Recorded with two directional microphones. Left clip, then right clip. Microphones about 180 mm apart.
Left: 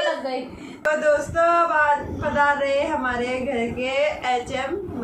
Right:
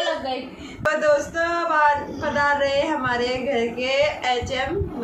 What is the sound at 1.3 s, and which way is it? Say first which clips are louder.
Speech: left 3 dB; 20° right (ahead or behind).